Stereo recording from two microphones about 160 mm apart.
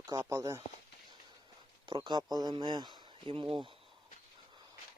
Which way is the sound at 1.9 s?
30° right (ahead or behind).